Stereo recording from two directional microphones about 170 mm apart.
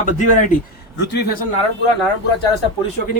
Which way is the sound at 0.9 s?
85° left.